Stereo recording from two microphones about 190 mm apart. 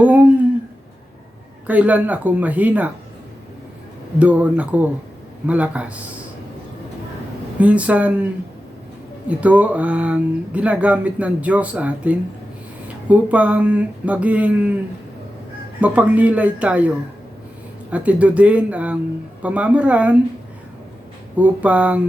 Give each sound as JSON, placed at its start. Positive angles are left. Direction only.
{"t": 0.0, "sound": "a sound", "side_deg": -10}
{"t": 1.6, "sound": "speech", "side_deg": -10}
{"t": 4.2, "sound": "speech", "side_deg": -5}
{"t": 7.6, "sound": "speech", "side_deg": -5}
{"t": 9.3, "sound": "speech", "side_deg": -5}
{"t": 15.8, "sound": "speech", "side_deg": -10}
{"t": 17.9, "sound": "speech", "side_deg": -5}
{"t": 21.3, "sound": "speech", "side_deg": -5}